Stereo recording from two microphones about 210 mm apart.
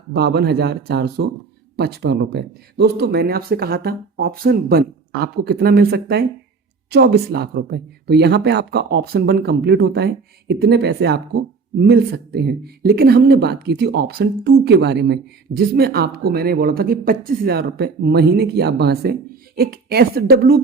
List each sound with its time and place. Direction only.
0.1 s speech: 50° right (ahead or behind)